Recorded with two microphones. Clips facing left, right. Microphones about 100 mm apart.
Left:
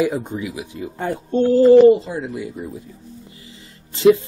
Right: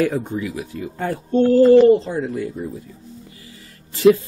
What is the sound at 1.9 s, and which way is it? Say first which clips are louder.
Speech: left 1 dB; 5° left (ahead or behind).